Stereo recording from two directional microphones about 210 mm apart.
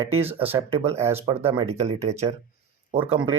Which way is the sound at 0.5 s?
30° right (ahead or behind).